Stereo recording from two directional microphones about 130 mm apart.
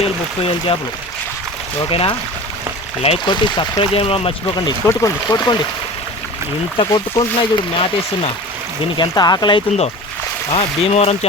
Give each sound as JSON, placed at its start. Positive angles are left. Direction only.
{"t": 0.0, "sound": "speech", "side_deg": 50}
{"t": 1.9, "sound": "speech", "side_deg": 45}
{"t": 3.2, "sound": "speech", "side_deg": 35}
{"t": 3.8, "sound": "speech", "side_deg": 45}
{"t": 4.9, "sound": "speech", "side_deg": 25}
{"t": 6.7, "sound": "speech", "side_deg": 35}
{"t": 10.5, "sound": "speech", "side_deg": 55}